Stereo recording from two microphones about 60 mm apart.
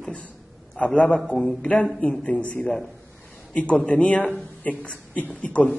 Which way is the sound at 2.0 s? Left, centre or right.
Left.